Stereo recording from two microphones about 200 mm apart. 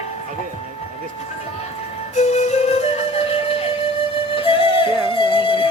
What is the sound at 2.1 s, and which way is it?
Flute, 35° left (ahead or behind).